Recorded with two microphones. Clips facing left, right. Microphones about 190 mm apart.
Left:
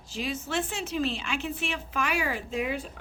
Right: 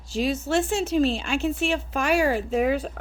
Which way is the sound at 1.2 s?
45° right (ahead or behind).